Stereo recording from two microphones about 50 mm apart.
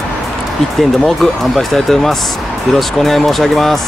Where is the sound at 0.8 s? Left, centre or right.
Centre.